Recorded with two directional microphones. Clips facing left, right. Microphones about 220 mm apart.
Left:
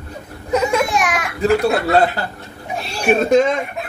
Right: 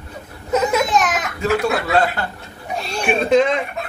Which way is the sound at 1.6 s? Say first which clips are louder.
Left 3 dB; 35° left (ahead or behind).